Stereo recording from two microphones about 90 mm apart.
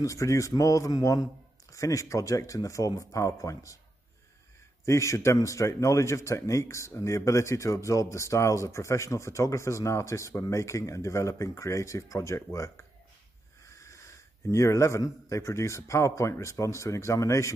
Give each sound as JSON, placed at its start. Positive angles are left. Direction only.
{"t": 0.0, "sound": "a man's voice", "side_deg": 35}
{"t": 4.8, "sound": "a man's voice", "side_deg": 35}
{"t": 13.7, "sound": "wheeze", "side_deg": 35}
{"t": 14.5, "sound": "a man's voice", "side_deg": 35}